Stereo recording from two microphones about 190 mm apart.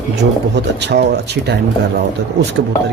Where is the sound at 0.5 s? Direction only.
60° right (ahead or behind).